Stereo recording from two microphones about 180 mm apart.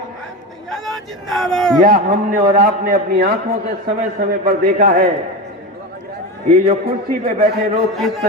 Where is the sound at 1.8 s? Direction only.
55° right (ahead or behind).